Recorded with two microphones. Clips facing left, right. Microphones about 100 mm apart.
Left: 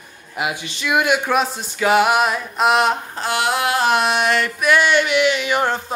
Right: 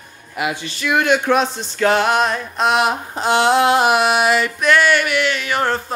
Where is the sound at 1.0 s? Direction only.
5° left (ahead or behind).